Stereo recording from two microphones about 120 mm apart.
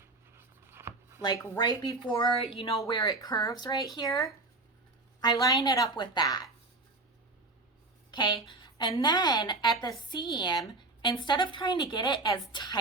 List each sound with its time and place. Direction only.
0.3 s writing: 20° right (ahead or behind)
1.2 s speech: 35° left (ahead or behind); by 2.8 s 50° left (ahead or behind)
2.8 s speech: 30° left (ahead or behind)
8.1 s speech: 40° left (ahead or behind)